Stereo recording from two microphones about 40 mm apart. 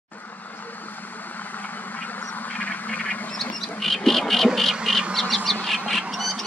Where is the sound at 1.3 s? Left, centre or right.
Left.